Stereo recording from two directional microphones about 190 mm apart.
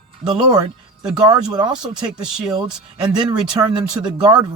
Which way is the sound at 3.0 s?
25° right (ahead or behind).